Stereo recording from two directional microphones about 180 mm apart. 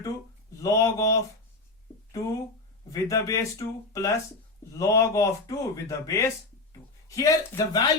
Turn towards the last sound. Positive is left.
turn(degrees=20)  # may be behind; listen again after turning